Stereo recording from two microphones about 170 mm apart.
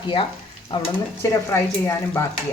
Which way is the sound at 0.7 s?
25° left (ahead or behind).